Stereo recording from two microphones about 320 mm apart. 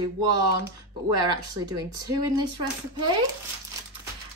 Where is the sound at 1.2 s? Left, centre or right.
Centre.